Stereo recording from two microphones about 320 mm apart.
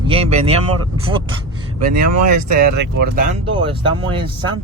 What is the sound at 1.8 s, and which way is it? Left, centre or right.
Speech, right.